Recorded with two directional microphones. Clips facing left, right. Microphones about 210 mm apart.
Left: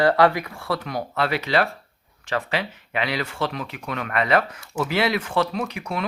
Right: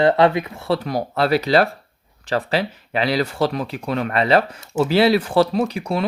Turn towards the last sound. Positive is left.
turn(degrees=-30)  # may be behind; listen again after turning